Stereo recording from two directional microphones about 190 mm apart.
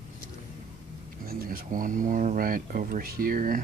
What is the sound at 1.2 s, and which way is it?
Speech, 50° right (ahead or behind).